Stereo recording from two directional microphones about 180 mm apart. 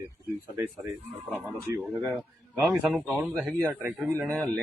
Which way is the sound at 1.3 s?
10° left (ahead or behind).